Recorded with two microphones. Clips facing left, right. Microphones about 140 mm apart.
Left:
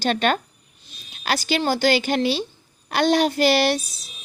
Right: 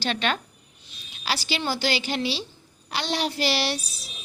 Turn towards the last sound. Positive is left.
turn(degrees=50)  # may be behind; listen again after turning